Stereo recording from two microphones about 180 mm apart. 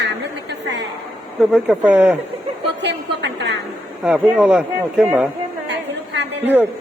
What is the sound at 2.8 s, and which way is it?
Speech, 75° right (ahead or behind).